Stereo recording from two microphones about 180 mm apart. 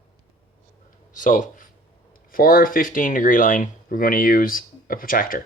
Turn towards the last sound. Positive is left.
turn(degrees=50)  # may be behind; listen again after turning